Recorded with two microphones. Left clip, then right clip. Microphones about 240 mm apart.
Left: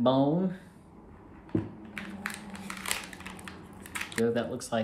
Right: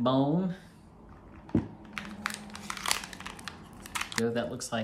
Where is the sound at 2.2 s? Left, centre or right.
Centre.